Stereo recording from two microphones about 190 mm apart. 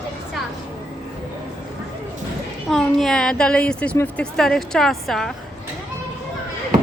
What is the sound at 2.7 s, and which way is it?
A woman's voice, centre (ahead or behind).